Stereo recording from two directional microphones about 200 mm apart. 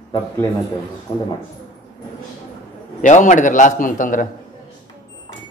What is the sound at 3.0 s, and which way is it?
A man's voice, 40° left (ahead or behind).